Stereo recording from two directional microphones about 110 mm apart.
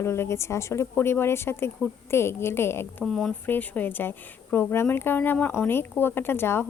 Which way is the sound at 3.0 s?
5° left (ahead or behind).